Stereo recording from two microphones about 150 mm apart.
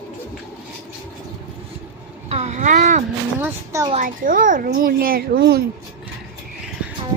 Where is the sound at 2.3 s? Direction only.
45° right (ahead or behind).